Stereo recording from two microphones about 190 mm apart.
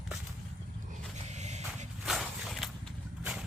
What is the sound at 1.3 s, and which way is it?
Vehicle, 35° right (ahead or behind).